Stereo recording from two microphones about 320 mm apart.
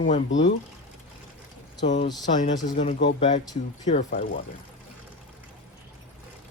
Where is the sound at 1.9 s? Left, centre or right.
Left.